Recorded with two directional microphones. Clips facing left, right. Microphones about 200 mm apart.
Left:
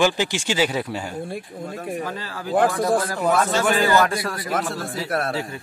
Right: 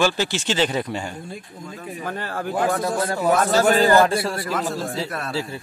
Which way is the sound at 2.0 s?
55° right (ahead or behind).